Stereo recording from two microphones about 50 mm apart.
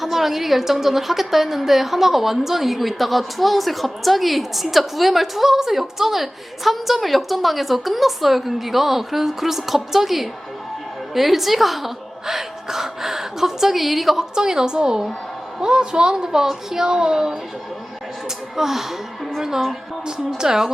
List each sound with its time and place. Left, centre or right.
0.0 s a woman's voice: centre
18.5 s a woman's voice: centre